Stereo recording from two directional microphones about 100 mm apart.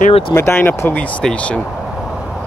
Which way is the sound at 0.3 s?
25° left (ahead or behind).